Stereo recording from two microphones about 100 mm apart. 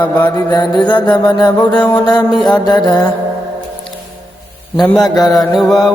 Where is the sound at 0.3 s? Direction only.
45° left (ahead or behind).